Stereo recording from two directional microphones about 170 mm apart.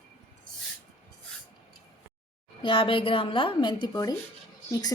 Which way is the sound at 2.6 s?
30° left (ahead or behind).